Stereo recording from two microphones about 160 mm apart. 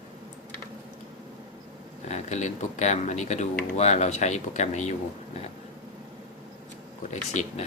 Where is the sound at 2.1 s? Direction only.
45° left (ahead or behind).